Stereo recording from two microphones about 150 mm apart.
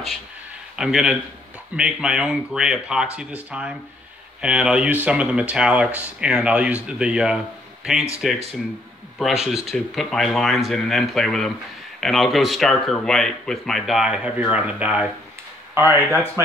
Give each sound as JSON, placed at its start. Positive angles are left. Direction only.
{"t": 0.7, "sound": "speech", "side_deg": -5}